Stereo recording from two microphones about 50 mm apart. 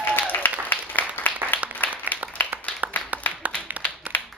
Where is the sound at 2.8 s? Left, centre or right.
Right.